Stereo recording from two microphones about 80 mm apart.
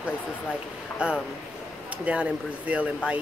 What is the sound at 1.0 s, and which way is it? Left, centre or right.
Speech, centre.